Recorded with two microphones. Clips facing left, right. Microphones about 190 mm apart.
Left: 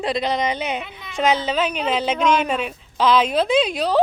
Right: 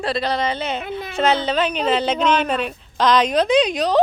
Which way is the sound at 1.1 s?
10° left (ahead or behind).